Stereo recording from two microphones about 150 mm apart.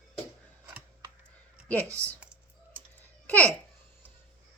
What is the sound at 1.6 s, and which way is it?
Speech, 10° left (ahead or behind).